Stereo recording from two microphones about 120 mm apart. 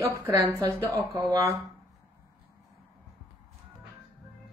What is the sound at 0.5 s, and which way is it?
A woman's voice, 25° right (ahead or behind).